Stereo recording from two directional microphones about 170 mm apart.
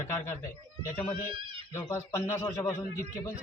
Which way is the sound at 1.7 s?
15° left (ahead or behind).